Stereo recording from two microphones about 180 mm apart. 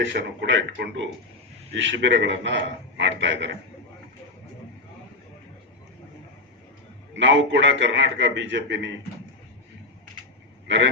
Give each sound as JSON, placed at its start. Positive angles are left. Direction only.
{"t": 0.0, "sound": "a man's voice", "side_deg": -80}
{"t": 7.2, "sound": "a man's voice", "side_deg": -90}